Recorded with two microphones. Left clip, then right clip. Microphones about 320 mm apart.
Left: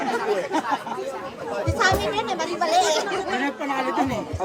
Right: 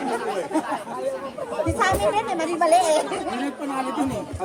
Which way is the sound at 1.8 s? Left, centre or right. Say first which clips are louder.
Even; right.